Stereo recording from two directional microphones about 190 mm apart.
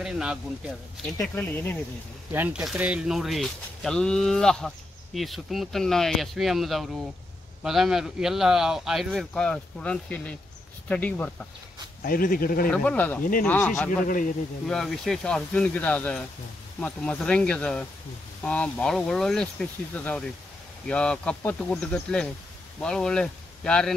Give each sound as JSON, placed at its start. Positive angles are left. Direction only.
{"t": 0.0, "sound": "speech", "side_deg": -5}
{"t": 1.2, "sound": "speech", "side_deg": 10}
{"t": 2.3, "sound": "speech", "side_deg": -5}
{"t": 12.0, "sound": "speech", "side_deg": 50}
{"t": 12.6, "sound": "speech", "side_deg": 5}
{"t": 14.0, "sound": "speech", "side_deg": 45}
{"t": 14.7, "sound": "speech", "side_deg": 0}